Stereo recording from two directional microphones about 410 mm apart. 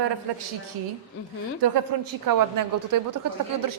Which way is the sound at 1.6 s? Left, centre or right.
Right.